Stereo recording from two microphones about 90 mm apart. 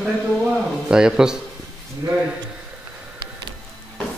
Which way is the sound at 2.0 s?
40° right (ahead or behind).